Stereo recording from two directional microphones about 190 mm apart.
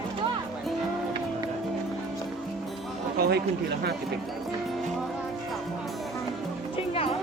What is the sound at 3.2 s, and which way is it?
Chatter, 55° right (ahead or behind).